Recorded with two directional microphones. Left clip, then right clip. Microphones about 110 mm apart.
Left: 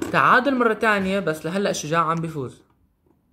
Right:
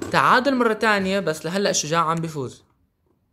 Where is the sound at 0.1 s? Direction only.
50° right (ahead or behind).